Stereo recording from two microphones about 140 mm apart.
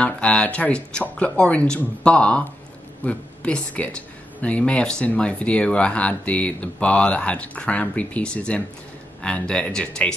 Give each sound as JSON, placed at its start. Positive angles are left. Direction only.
{"t": 0.0, "sound": "speech", "side_deg": 10}